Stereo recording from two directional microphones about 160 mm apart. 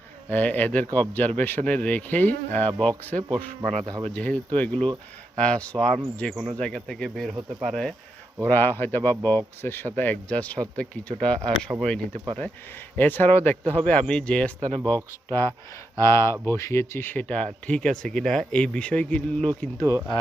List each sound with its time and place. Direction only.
0.3 s speech: 10° left (ahead or behind)
8.4 s speech: 10° left (ahead or behind)
19.8 s speech: 20° right (ahead or behind)